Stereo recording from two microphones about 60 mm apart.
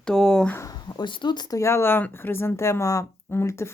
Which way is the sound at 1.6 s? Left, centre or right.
Left.